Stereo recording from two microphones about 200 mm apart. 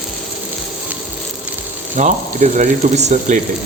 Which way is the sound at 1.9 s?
40° right (ahead or behind).